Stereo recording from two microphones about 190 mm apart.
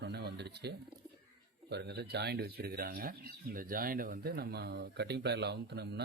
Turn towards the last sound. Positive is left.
turn(degrees=-60)  # may be behind; listen again after turning